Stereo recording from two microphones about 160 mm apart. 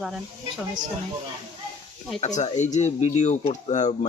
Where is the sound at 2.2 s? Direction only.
45° left (ahead or behind).